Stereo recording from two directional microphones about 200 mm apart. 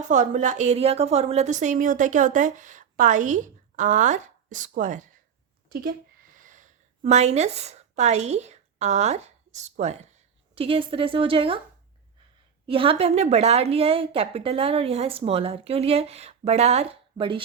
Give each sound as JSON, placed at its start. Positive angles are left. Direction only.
{"t": 0.1, "sound": "a woman's voice", "side_deg": -40}
{"t": 6.3, "sound": "a woman's voice", "side_deg": -40}
{"t": 12.6, "sound": "a woman's voice", "side_deg": -25}